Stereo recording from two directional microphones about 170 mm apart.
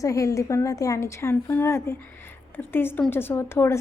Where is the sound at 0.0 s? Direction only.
20° left (ahead or behind).